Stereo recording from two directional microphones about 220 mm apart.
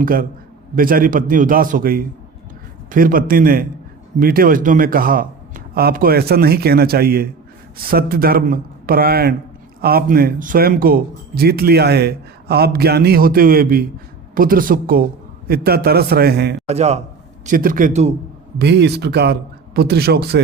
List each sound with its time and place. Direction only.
0.0 s a man's voice: 40° right (ahead or behind)
16.6 s a man's voice: 30° right (ahead or behind)
18.6 s speech: 50° right (ahead or behind)